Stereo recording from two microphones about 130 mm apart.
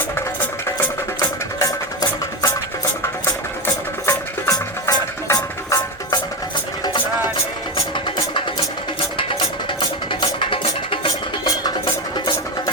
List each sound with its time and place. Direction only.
1.5 s music: 25° left (ahead or behind)
4.0 s music: 25° left (ahead or behind)
7.9 s music: 40° left (ahead or behind)
10.1 s music: 40° left (ahead or behind)
12.1 s music: 30° left (ahead or behind)